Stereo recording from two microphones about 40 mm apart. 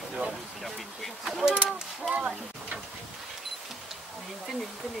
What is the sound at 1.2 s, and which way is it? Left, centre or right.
Speech, centre.